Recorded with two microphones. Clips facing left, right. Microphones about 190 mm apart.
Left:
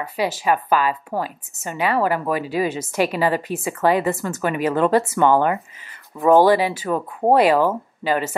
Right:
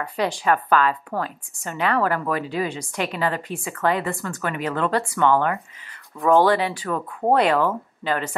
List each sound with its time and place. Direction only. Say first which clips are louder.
0.0 s a woman's voice: left 1 dB; 5° left (ahead or behind); by 4.4 s 20° left (ahead or behind)
4.4 s a woman's voice: left 5 dB; 10° left (ahead or behind)
5.0 s a woman's voice: left 3 dB; 20° left (ahead or behind)